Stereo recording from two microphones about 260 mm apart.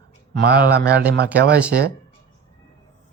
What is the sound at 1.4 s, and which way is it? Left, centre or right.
Speech, right.